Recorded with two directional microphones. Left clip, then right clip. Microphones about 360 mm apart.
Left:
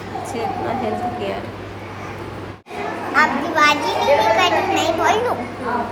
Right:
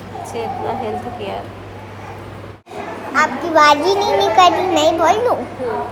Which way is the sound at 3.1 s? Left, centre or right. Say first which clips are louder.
Right 2 dB; centre.